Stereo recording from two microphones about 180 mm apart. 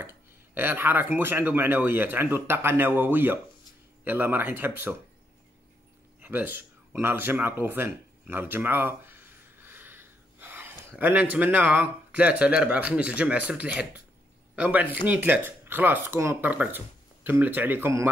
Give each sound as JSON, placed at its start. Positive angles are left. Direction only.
{"t": 0.6, "sound": "speech", "side_deg": -10}
{"t": 6.2, "sound": "a sound", "side_deg": -10}
{"t": 11.0, "sound": "speech", "side_deg": -10}